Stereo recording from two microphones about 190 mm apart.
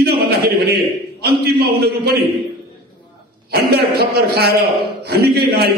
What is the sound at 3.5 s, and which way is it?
A man's voice, 55° right (ahead or behind).